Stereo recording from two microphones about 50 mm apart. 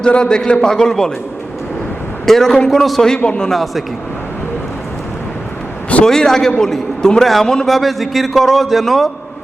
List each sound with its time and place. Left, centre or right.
0.0 s a man's voice: centre
2.2 s a man's voice: centre
3.2 s a man's voice: centre
3.5 s speech: centre
6.1 s a man's voice: centre